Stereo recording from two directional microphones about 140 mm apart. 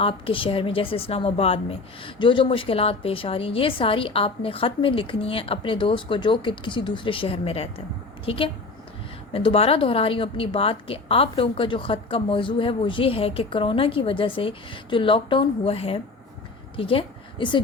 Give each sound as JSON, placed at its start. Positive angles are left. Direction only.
{"t": 0.0, "sound": "a woman's voice", "side_deg": 40}